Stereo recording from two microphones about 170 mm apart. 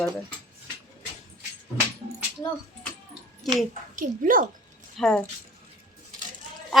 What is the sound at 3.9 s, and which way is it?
Speech, 50° right (ahead or behind).